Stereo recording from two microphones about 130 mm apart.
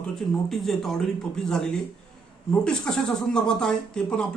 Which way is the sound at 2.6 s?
5° left (ahead or behind).